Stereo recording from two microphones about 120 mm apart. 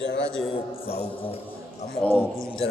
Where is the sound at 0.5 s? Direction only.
50° left (ahead or behind).